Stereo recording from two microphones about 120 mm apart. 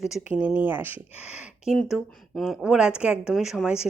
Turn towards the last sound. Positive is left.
turn(degrees=-5)  # may be behind; listen again after turning